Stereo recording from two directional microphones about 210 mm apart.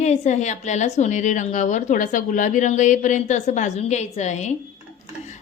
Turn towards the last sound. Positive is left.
turn(degrees=35)  # may be behind; listen again after turning